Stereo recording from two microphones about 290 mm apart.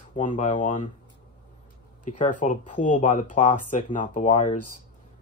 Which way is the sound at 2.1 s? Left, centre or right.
Left.